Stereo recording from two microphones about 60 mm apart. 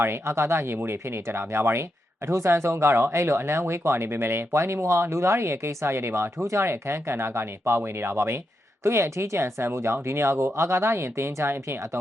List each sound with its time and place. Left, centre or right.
0.0 s speech: right